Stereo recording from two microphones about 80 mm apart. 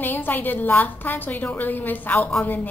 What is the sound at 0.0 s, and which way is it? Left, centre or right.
A woman's voice, left.